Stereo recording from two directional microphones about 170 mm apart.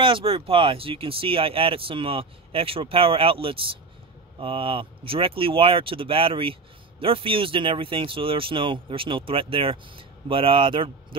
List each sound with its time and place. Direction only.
0.0 s speech: 30° right (ahead or behind)